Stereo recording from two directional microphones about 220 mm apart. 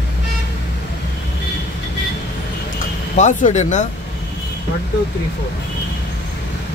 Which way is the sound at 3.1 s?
35° left (ahead or behind).